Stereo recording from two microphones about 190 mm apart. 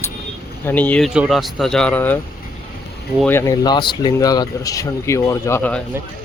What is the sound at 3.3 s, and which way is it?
Speech, 15° left (ahead or behind).